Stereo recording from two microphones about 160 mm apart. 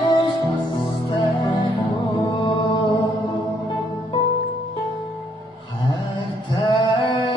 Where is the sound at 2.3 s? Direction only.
30° left (ahead or behind).